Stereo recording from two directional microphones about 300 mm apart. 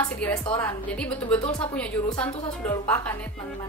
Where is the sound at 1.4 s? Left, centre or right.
Centre.